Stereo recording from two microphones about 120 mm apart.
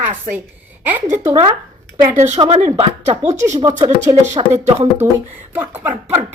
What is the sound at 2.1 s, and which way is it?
Speech, 75° right (ahead or behind).